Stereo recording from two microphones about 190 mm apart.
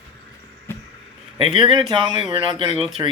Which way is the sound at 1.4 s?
25° right (ahead or behind).